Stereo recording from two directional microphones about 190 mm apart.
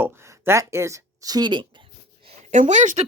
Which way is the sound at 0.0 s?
15° right (ahead or behind).